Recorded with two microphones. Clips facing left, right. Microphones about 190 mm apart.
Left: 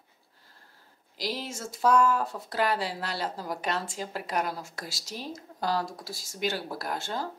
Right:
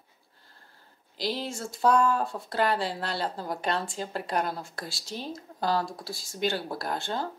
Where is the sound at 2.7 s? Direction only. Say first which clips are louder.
Right 2 dB; 5° left (ahead or behind).